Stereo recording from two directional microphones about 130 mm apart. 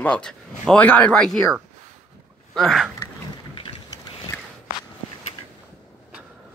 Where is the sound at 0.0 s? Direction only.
10° left (ahead or behind).